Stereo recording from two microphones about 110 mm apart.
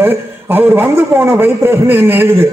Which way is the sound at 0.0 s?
20° right (ahead or behind).